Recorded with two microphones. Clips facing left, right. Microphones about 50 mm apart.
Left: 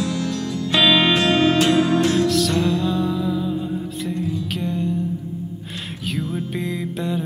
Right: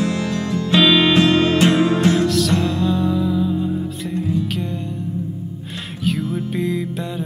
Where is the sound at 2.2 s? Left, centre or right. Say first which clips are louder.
Right 1 dB; centre.